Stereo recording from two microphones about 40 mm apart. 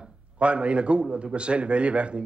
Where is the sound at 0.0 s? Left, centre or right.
Right.